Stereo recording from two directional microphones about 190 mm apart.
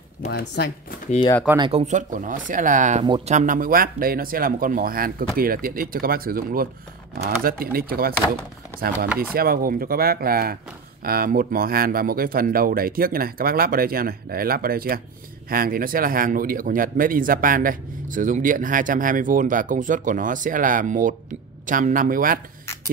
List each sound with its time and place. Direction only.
0.3 s speech: 60° left (ahead or behind)
1.6 s a man's voice: 30° right (ahead or behind); by 8.1 s 50° right (ahead or behind)
9.3 s a man's voice: 50° right (ahead or behind)